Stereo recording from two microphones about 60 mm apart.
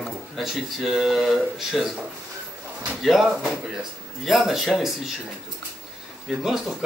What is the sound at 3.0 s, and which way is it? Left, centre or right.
Speech, centre.